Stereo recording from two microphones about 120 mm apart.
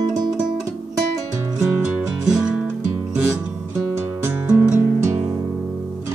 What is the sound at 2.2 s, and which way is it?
Music, 10° right (ahead or behind).